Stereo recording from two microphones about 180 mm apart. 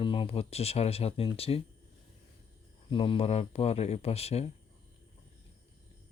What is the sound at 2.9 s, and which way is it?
Speech, 30° left (ahead or behind).